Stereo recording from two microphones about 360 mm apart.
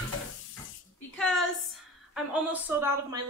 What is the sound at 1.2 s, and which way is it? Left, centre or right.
A woman's voice, centre.